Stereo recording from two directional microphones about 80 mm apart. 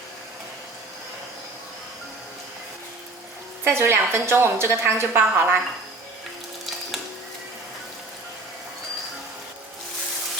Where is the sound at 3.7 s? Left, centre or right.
Right.